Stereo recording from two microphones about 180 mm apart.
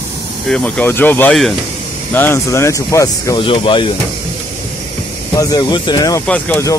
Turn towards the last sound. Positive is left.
turn(degrees=5)  # may be behind; listen again after turning